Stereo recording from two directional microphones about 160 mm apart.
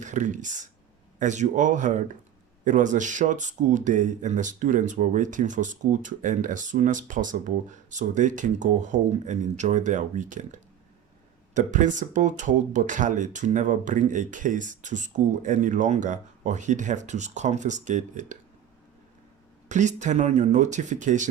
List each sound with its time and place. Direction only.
0.0 s speech: 50° right (ahead or behind)
19.6 s speech: 50° right (ahead or behind)